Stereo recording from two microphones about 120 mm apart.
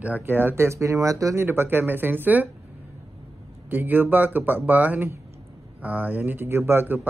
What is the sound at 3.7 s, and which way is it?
A man's voice, 15° right (ahead or behind).